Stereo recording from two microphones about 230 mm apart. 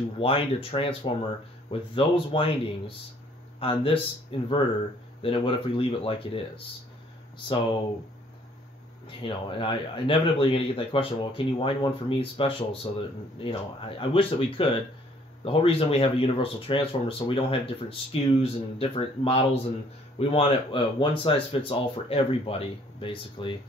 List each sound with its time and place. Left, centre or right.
0.2 s a man's voice: left
9.0 s a man's voice: left